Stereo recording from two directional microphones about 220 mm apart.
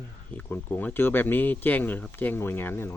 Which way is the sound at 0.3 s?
10° left (ahead or behind).